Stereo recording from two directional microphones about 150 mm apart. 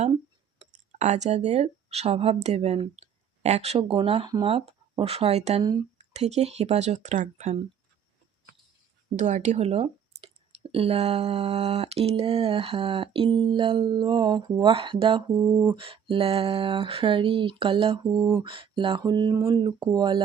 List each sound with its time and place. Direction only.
0.6 s speech: 50° right (ahead or behind)
9.1 s speech: 55° right (ahead or behind); by 15.2 s 35° right (ahead or behind)
15.4 s speech: 25° right (ahead or behind)
18.2 s a sound: 20° right (ahead or behind)
18.4 s speech: 35° right (ahead or behind)